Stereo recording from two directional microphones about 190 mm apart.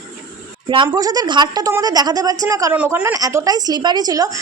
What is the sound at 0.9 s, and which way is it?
A woman's voice, 20° right (ahead or behind).